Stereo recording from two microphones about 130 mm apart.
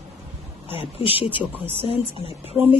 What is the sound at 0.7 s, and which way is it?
Speech, 45° left (ahead or behind).